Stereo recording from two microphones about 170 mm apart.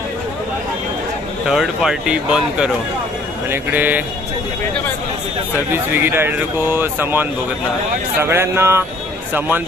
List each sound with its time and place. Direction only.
1.5 s speech: 5° right (ahead or behind)
5.7 s speech: 15° right (ahead or behind)